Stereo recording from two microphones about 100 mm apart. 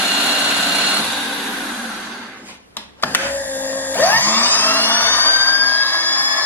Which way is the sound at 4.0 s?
20° left (ahead or behind).